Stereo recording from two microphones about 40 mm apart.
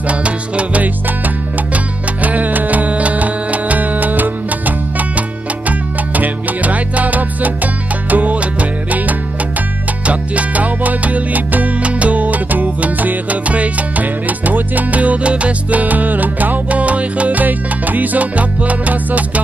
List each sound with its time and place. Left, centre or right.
0.1 s music: right
2.2 s music: right